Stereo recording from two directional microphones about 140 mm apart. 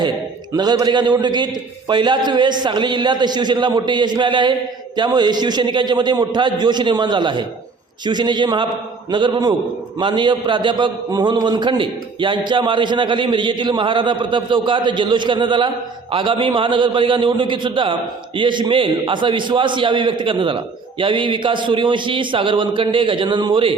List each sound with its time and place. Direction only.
0.5 s a man's voice: 30° right (ahead or behind)